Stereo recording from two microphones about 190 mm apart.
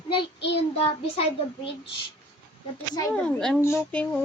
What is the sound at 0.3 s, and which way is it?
Child singing, 65° left (ahead or behind).